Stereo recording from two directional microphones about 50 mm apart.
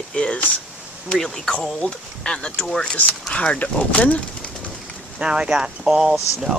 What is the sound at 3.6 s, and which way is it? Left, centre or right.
Speech, left.